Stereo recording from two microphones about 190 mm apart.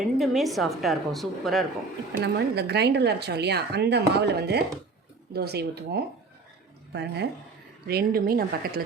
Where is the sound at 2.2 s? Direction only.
60° right (ahead or behind).